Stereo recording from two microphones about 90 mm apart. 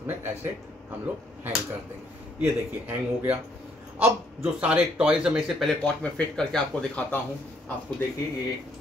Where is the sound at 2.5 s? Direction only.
20° right (ahead or behind).